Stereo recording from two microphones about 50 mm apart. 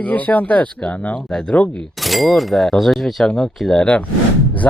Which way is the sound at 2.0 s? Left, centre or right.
Centre.